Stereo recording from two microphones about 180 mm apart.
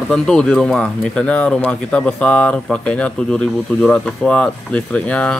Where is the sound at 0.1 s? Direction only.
5° left (ahead or behind).